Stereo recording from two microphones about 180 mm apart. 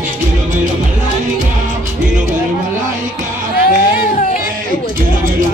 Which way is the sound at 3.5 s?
55° left (ahead or behind).